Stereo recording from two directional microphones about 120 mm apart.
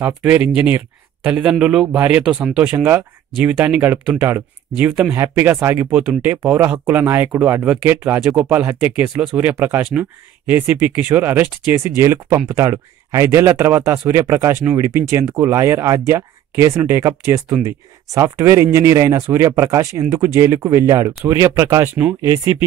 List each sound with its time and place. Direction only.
0.0 s speech: 15° right (ahead or behind)
21.9 s speech: 10° right (ahead or behind)